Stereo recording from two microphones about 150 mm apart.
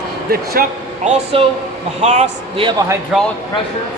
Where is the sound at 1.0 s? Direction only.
45° right (ahead or behind).